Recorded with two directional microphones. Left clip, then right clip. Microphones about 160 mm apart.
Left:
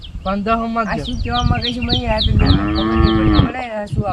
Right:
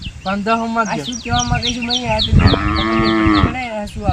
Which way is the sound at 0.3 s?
20° left (ahead or behind).